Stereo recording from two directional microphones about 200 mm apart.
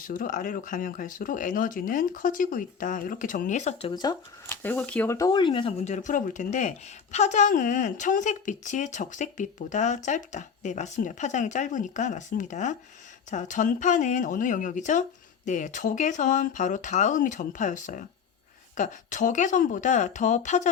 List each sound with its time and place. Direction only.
0.1 s speech: 40° left (ahead or behind)
3.9 s speech: 20° left (ahead or behind); by 20.7 s 35° left (ahead or behind)